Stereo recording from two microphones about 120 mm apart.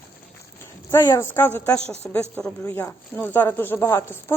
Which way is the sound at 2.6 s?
20° left (ahead or behind).